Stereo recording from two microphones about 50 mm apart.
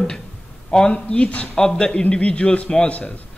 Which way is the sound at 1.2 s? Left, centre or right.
Left.